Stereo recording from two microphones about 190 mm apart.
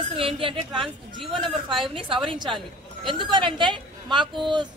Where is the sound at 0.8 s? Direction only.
Centre (ahead or behind).